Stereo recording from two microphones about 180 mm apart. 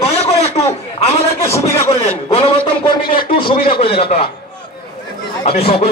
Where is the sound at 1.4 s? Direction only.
15° left (ahead or behind).